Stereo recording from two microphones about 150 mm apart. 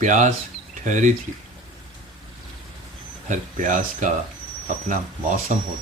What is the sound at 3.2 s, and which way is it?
Speech, 60° right (ahead or behind).